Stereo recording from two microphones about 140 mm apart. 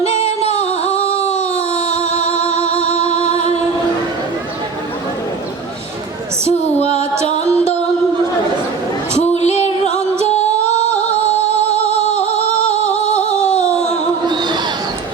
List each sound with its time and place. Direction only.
0.0 s music: 50° left (ahead or behind)
1.3 s a sound: 55° left (ahead or behind)
2.4 s music: 20° right (ahead or behind)
6.5 s female singing: 50° left (ahead or behind)
7.4 s music: 20° right (ahead or behind)
9.2 s music: 50° left (ahead or behind)
11.9 s music: 45° right (ahead or behind)
12.7 s music: 55° left (ahead or behind)
14.3 s a sound: 30° right (ahead or behind)